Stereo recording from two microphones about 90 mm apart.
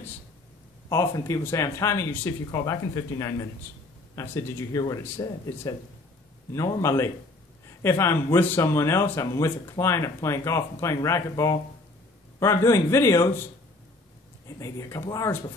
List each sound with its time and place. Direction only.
0.8 s speech: 35° left (ahead or behind)
6.5 s speech: 35° left (ahead or behind)
14.6 s speech: 35° left (ahead or behind)